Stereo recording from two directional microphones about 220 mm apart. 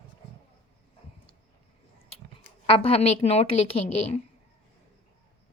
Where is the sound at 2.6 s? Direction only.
25° left (ahead or behind).